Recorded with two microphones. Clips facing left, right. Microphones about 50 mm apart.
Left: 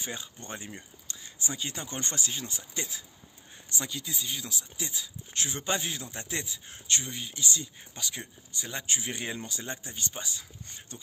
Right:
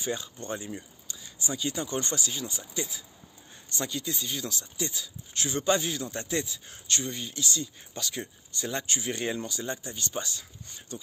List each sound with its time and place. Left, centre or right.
0.0 s speech: left
3.7 s speech: centre
8.8 s speech: left
10.1 s speech: centre